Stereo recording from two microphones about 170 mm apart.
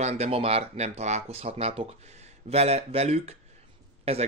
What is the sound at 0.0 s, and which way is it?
Speech, 40° right (ahead or behind).